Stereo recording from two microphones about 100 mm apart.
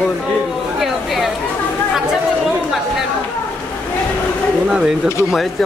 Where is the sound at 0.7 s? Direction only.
Centre (ahead or behind).